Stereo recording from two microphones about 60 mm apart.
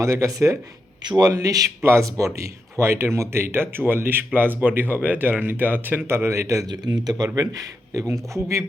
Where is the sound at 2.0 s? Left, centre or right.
Right.